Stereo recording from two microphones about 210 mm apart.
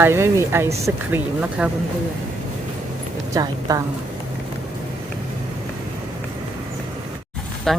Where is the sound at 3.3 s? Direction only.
15° right (ahead or behind).